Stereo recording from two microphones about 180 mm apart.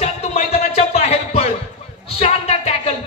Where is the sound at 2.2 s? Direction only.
35° left (ahead or behind).